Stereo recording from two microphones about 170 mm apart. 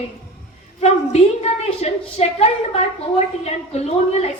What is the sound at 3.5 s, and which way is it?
Speech, 40° left (ahead or behind).